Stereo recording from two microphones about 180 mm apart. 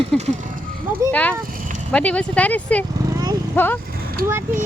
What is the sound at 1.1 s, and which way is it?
Speech, 10° left (ahead or behind).